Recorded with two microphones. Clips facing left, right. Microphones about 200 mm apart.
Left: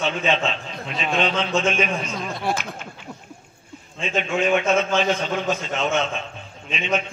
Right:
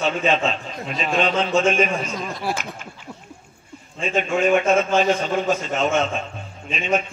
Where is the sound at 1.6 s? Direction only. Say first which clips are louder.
Right 4 dB; 45° right (ahead or behind).